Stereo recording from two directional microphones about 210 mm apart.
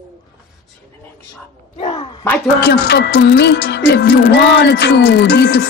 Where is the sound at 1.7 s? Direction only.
30° left (ahead or behind).